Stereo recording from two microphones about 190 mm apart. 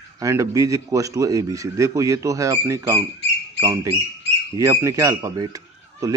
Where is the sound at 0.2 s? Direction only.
15° right (ahead or behind).